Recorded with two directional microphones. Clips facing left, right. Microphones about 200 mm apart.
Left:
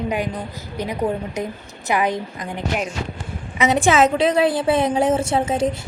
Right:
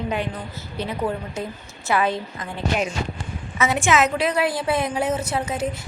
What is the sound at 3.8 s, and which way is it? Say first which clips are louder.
A woman's voice: left 4 dB; 30° left (ahead or behind).